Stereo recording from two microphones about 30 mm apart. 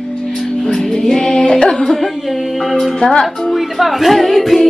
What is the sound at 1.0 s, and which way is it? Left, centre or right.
Music, left.